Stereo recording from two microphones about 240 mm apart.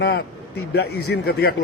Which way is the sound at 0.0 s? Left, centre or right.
Left.